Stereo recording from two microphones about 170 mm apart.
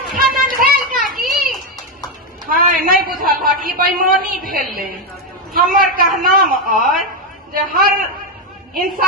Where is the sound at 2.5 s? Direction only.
55° right (ahead or behind).